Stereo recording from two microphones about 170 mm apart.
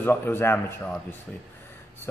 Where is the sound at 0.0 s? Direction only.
15° left (ahead or behind).